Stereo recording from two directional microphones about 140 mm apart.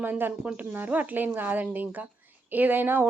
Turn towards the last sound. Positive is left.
turn(degrees=-15)  # may be behind; listen again after turning